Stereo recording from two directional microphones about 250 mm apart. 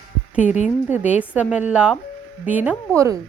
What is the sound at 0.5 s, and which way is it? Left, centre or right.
Speech, left.